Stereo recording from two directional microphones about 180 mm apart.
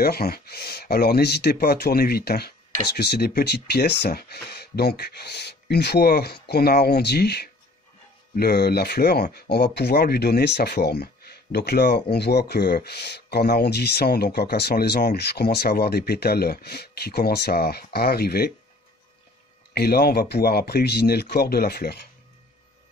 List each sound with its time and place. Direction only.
0.0 s speech: 60° left (ahead or behind)
19.7 s speech: 60° left (ahead or behind)